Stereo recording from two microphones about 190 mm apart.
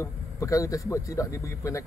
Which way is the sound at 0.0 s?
15° left (ahead or behind).